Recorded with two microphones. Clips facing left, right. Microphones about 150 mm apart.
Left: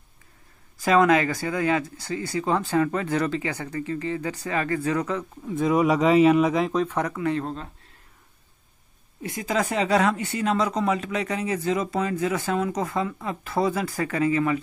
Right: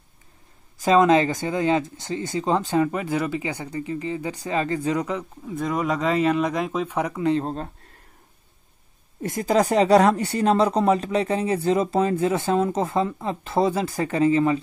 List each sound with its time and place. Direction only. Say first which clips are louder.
0.8 s speech: right 2 dB; 25° right (ahead or behind)
5.5 s speech: left 4 dB; 5° left (ahead or behind); by 7.2 s 10° right (ahead or behind)
7.2 s speech: right 3 dB; 25° right (ahead or behind)
9.2 s speech: right 5 dB; 45° right (ahead or behind); by 14.6 s 25° right (ahead or behind)